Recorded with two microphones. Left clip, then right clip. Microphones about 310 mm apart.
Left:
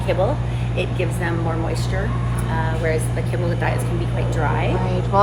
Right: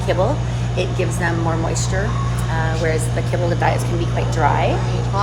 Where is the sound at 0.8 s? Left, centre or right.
Right.